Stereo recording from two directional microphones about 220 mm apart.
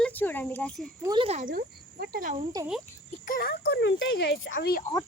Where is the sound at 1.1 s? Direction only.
25° right (ahead or behind); by 2.3 s 40° right (ahead or behind).